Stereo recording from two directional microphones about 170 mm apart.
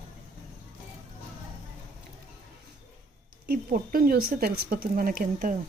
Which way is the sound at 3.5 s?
60° right (ahead or behind).